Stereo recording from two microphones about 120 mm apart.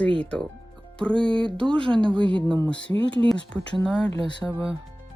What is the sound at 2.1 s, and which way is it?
Speech, 40° right (ahead or behind).